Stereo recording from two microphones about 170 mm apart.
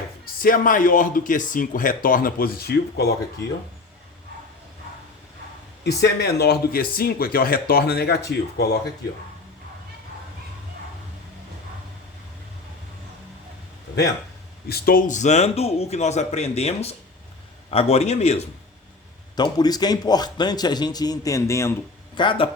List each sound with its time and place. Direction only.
0.4 s speech: 55° left (ahead or behind); by 3.1 s 70° left (ahead or behind)
5.8 s speech: 75° left (ahead or behind)
14.7 s a man's voice: 60° left (ahead or behind); by 18.4 s 40° left (ahead or behind)
19.4 s a man's voice: 25° left (ahead or behind)
22.1 s speech: 30° left (ahead or behind)